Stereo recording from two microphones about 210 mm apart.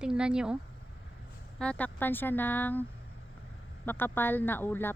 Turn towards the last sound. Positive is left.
turn(degrees=10)  # may be behind; listen again after turning